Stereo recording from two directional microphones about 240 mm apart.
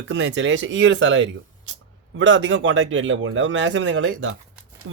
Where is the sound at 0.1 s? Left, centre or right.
Right.